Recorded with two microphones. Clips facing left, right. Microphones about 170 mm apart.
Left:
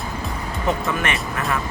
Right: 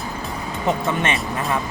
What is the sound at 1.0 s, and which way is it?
Speech, 25° right (ahead or behind).